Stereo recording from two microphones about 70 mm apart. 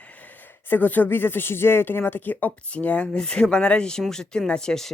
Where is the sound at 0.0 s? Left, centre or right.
Left.